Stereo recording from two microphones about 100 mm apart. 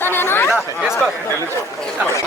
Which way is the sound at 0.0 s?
20° left (ahead or behind).